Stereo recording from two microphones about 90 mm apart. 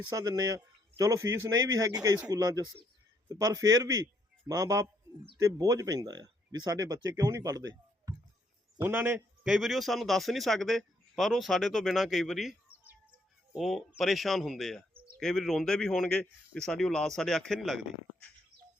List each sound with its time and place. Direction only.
0.1 s a man's voice: 40° right (ahead or behind)
8.8 s a man's voice: 20° right (ahead or behind); by 12.5 s 5° right (ahead or behind)
12.7 s bird: 15° right (ahead or behind)
13.6 s a man's voice: centre (ahead or behind)